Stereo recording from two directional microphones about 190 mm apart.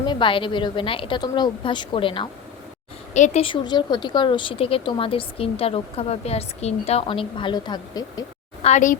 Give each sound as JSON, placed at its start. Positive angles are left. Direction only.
{"t": 0.0, "sound": "speech", "side_deg": 25}
{"t": 3.2, "sound": "speech", "side_deg": 35}
{"t": 8.6, "sound": "a woman's voice", "side_deg": 40}